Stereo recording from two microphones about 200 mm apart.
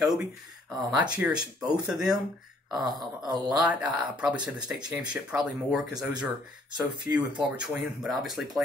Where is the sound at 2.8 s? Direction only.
20° right (ahead or behind).